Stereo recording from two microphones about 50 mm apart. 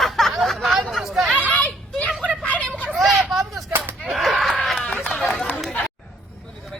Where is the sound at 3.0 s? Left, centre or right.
Centre.